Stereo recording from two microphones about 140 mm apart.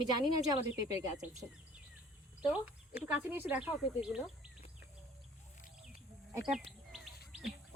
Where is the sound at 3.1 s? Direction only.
15° right (ahead or behind).